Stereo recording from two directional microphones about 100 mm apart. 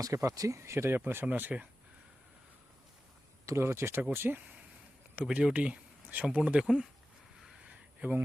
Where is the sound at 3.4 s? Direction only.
25° right (ahead or behind).